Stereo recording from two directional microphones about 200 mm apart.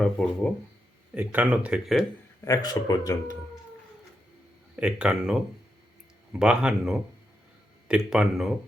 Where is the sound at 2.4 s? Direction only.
20° left (ahead or behind).